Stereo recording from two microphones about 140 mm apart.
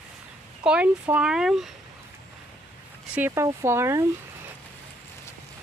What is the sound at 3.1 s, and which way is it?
Speech, 15° right (ahead or behind).